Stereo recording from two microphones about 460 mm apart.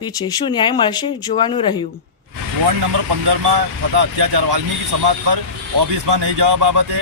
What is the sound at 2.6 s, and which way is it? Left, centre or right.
Speech, right.